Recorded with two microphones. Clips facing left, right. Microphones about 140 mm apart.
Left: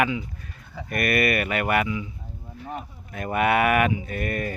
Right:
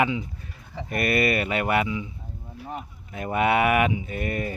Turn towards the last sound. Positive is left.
turn(degrees=-20)  # may be behind; listen again after turning